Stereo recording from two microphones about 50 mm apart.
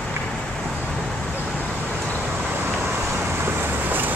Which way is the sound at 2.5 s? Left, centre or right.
Right.